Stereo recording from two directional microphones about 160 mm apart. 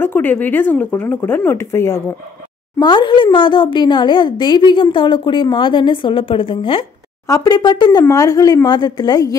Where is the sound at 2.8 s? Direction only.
30° left (ahead or behind).